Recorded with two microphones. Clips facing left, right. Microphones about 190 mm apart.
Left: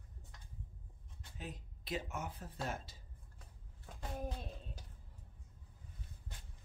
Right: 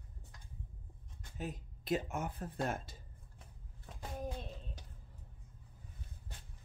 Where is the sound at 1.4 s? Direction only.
50° right (ahead or behind).